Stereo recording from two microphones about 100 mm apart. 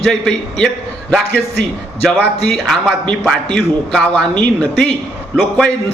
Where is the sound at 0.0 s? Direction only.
5° left (ahead or behind).